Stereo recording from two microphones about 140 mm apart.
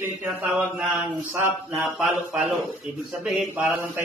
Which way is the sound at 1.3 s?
20° right (ahead or behind).